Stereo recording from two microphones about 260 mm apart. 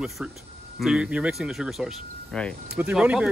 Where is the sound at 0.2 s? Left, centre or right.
Centre.